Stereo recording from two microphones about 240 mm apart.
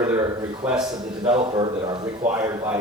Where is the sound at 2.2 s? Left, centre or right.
Centre.